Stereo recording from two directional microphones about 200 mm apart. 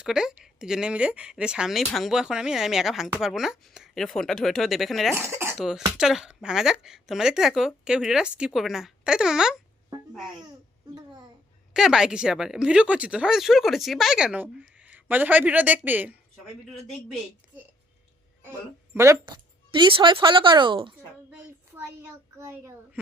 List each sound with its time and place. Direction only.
0.0 s speech: 5° right (ahead or behind)
5.1 s cough: 10° right (ahead or behind)
5.5 s speech: centre (ahead or behind)
11.7 s speech: 5° right (ahead or behind)
18.9 s speech: 20° right (ahead or behind)
21.2 s a child's voice: 10° right (ahead or behind)